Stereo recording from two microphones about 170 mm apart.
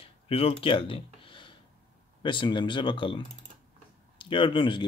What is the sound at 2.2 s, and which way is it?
Speech, 30° left (ahead or behind).